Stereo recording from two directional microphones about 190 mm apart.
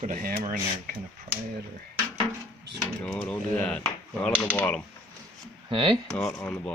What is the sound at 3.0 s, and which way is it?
Speech, 10° left (ahead or behind).